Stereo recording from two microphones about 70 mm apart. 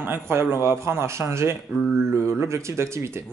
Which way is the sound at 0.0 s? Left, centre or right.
Right.